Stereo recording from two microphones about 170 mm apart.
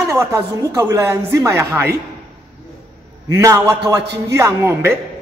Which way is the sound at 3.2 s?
15° right (ahead or behind).